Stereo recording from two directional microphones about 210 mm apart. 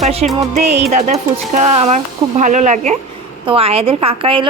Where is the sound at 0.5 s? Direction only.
30° right (ahead or behind).